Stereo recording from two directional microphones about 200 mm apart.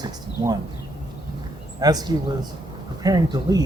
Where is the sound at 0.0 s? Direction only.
20° right (ahead or behind).